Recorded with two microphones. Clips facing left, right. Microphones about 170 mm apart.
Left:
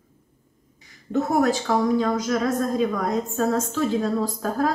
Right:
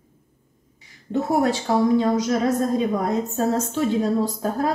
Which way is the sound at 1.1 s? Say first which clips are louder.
Even; 25° right (ahead or behind).